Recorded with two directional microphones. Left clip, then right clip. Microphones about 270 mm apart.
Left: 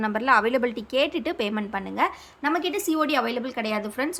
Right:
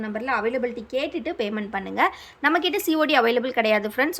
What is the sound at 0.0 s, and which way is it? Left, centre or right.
A woman's voice, centre.